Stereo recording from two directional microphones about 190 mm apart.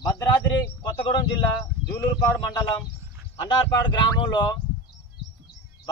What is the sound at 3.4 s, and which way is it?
A man's voice, 25° left (ahead or behind).